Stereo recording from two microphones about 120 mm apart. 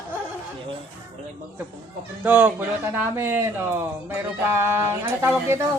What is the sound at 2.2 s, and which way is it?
Speech, 15° right (ahead or behind).